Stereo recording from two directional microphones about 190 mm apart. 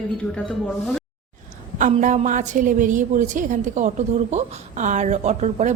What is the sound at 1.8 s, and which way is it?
A woman's voice, 40° right (ahead or behind).